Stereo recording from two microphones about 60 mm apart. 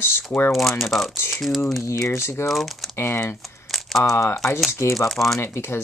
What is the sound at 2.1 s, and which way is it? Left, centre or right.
Speech, left.